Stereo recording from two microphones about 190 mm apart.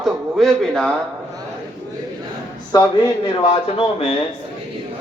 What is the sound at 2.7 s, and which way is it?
A man's voice, 20° left (ahead or behind).